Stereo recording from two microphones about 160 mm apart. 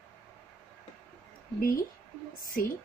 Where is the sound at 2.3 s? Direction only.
60° left (ahead or behind).